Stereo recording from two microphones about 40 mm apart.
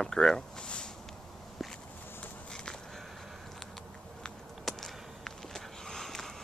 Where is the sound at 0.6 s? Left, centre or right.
Left.